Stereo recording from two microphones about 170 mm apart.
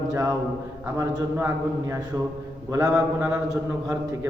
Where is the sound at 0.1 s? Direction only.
20° right (ahead or behind).